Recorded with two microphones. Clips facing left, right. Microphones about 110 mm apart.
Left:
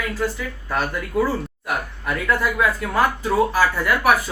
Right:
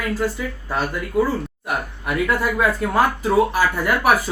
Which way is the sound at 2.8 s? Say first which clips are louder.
Right 3 dB; 25° right (ahead or behind).